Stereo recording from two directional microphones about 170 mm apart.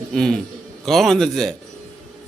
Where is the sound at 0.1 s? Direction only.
5° left (ahead or behind).